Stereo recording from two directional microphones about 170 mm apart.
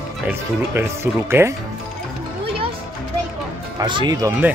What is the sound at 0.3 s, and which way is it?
Speech, 15° right (ahead or behind).